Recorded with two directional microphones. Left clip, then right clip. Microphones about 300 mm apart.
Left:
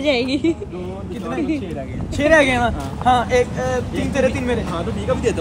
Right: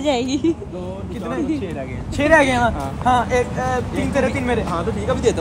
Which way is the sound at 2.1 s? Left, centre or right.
Centre.